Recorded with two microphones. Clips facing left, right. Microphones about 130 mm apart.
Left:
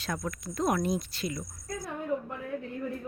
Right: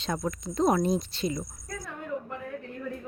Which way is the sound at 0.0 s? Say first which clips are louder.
Right 4 dB; 25° right (ahead or behind).